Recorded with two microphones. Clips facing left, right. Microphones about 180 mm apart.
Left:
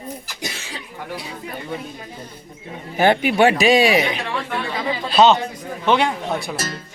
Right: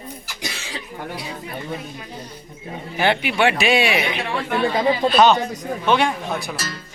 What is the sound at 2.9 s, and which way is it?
Speech, 45° left (ahead or behind).